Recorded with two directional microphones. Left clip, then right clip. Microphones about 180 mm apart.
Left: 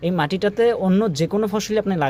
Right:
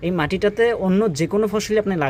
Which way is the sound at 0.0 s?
Centre (ahead or behind).